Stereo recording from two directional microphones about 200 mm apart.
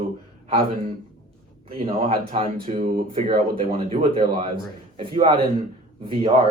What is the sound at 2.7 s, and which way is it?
Speech, 40° right (ahead or behind).